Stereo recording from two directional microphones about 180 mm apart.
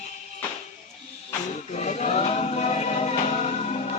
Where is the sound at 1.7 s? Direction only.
40° left (ahead or behind).